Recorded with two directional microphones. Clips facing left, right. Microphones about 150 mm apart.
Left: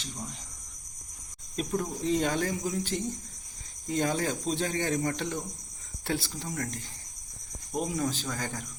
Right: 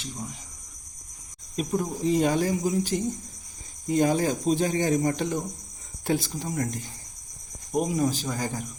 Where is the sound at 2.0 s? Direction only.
10° right (ahead or behind).